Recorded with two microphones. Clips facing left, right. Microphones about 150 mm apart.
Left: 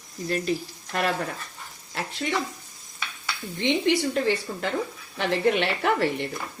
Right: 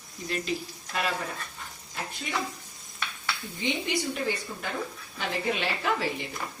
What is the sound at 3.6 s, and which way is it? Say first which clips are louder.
A woman's voice: left 8 dB; 75° left (ahead or behind).